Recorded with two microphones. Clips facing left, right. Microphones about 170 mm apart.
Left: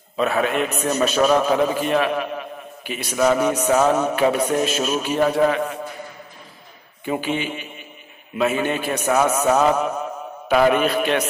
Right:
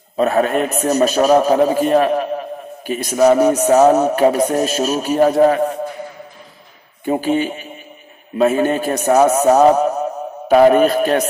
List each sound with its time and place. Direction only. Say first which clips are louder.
0.2 s a man's voice: right 5 dB; 40° right (ahead or behind)
7.1 s a man's voice: right 6 dB; 40° right (ahead or behind)